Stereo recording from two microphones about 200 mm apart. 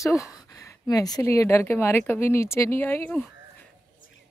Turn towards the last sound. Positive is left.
turn(degrees=10)  # may be behind; listen again after turning